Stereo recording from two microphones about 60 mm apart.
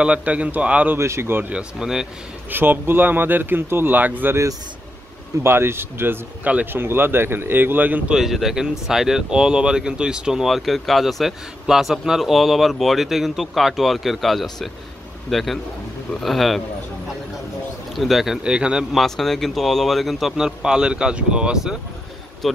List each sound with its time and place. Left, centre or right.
0.0 s a man's voice: right
0.9 s speech: right
1.5 s speech: centre
2.5 s speech: right
5.4 s speech: right
6.4 s a man's voice: right
6.7 s speech: right
8.1 s speech: centre
10.4 s speech: centre
17.9 s speech: centre
18.4 s speech: centre
18.9 s speech: centre
22.4 s speech: centre